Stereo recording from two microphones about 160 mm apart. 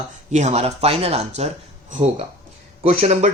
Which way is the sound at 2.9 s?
45° right (ahead or behind).